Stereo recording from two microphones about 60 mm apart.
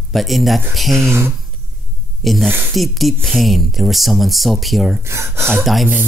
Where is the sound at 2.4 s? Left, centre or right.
Right.